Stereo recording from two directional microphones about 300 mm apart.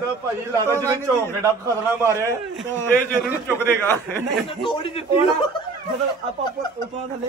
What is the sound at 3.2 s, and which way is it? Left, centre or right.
A man's voice, centre.